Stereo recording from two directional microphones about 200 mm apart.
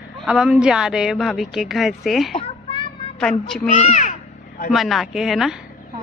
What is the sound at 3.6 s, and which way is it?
Speech, 35° left (ahead or behind).